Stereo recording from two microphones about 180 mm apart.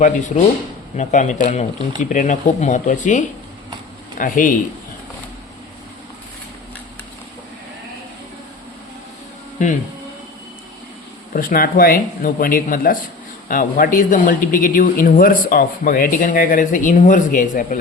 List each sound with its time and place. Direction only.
0.0 s speech: 45° left (ahead or behind)
11.3 s speech: 50° left (ahead or behind)